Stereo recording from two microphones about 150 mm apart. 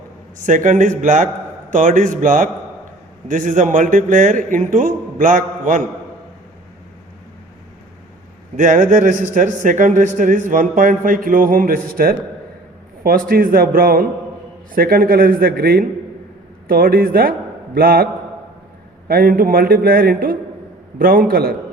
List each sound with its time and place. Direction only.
0.3 s speech: 60° right (ahead or behind)
8.5 s a man's voice: 60° right (ahead or behind); by 15.9 s 90° right
16.6 s a man's voice: 75° right (ahead or behind)